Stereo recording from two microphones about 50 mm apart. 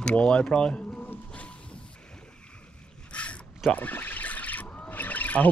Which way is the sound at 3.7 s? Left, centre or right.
Left.